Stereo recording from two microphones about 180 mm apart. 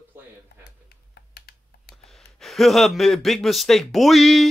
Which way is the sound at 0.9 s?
60° left (ahead or behind).